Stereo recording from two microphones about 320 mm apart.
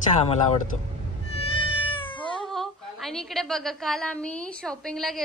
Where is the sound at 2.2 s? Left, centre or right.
Centre.